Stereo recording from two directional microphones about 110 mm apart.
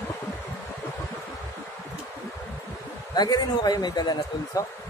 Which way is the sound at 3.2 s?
40° left (ahead or behind).